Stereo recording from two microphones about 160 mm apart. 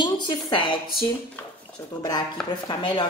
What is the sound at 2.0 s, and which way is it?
Speech, 25° left (ahead or behind).